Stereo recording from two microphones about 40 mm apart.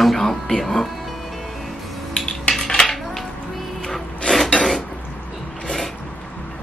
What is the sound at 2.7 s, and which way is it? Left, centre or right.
Dishes, left.